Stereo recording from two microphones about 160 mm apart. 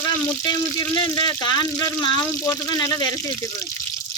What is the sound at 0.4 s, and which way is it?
Speech, 25° left (ahead or behind).